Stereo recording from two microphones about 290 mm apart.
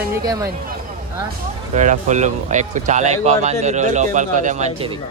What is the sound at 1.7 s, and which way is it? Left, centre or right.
Speech, right.